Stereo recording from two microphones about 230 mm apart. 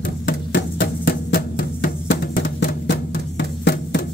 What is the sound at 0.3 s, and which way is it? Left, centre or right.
Music, left.